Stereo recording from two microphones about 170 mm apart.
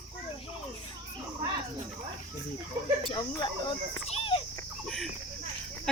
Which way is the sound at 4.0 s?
35° left (ahead or behind).